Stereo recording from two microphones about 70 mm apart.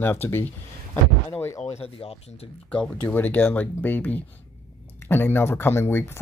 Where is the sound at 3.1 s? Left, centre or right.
Left.